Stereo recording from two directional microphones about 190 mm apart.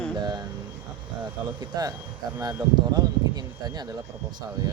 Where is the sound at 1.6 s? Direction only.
20° right (ahead or behind).